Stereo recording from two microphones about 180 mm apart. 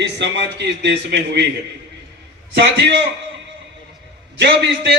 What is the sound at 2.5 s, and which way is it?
Speech, 75° right (ahead or behind).